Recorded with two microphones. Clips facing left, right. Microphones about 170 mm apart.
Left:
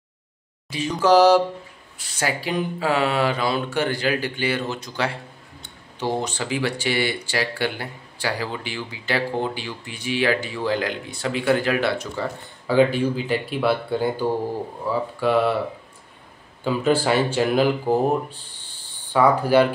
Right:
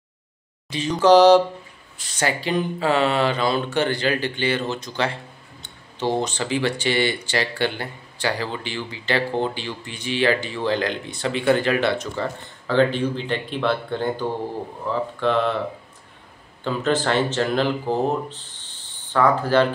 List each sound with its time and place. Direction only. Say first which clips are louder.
0.7 s speech: right 3 dB; 5° left (ahead or behind)
16.6 s speech: left 2 dB; 10° left (ahead or behind)